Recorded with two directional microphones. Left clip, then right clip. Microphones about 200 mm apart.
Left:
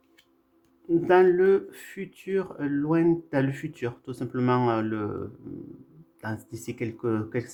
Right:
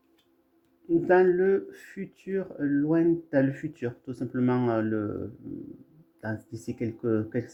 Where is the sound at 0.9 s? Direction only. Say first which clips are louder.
Left 2 dB; 10° right (ahead or behind).